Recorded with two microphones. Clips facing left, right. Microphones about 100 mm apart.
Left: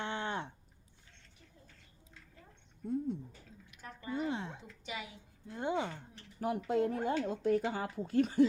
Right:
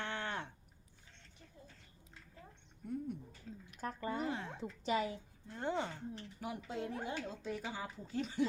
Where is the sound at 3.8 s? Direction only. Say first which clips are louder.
Even; 40° right (ahead or behind).